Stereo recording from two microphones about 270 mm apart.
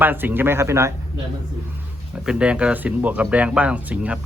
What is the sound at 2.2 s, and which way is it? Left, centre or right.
Speech, centre.